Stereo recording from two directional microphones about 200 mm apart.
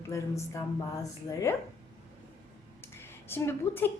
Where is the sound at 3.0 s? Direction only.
10° left (ahead or behind).